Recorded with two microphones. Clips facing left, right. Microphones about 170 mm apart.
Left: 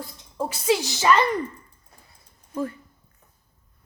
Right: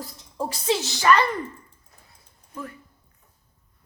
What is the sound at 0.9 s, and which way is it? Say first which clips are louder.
Speech: right 2 dB; 20° left (ahead or behind).